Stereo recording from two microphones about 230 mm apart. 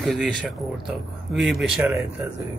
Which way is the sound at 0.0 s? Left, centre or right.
Centre.